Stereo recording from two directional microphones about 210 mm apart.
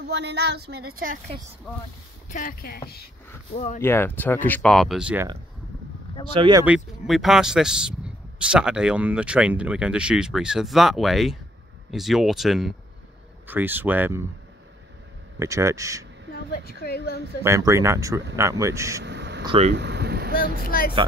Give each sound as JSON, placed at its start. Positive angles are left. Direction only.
{"t": 0.1, "sound": "a woman's voice", "side_deg": -50}
{"t": 2.2, "sound": "speech", "side_deg": 40}
{"t": 3.8, "sound": "speech", "side_deg": 10}
{"t": 6.3, "sound": "speech", "side_deg": -25}
{"t": 6.6, "sound": "speech", "side_deg": -5}
{"t": 15.3, "sound": "speech", "side_deg": -15}
{"t": 16.6, "sound": "speech", "side_deg": 50}
{"t": 17.4, "sound": "speech", "side_deg": -15}
{"t": 19.0, "sound": "a sound", "side_deg": -55}
{"t": 19.4, "sound": "speech", "side_deg": -25}
{"t": 19.7, "sound": "vehicle", "side_deg": -55}
{"t": 20.6, "sound": "speech", "side_deg": 45}